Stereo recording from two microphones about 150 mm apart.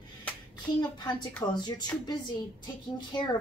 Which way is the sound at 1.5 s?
30° left (ahead or behind).